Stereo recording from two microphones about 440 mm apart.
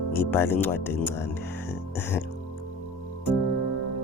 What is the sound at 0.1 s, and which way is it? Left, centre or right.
Speech, centre.